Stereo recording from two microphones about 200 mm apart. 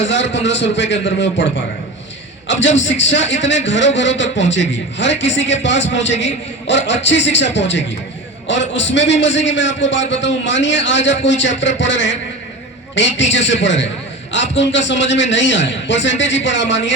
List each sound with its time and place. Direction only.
0.0 s a man's voice: 65° left (ahead or behind)
2.5 s a man's voice: 70° left (ahead or behind)